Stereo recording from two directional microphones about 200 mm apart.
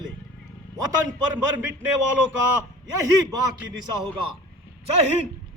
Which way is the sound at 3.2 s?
20° right (ahead or behind).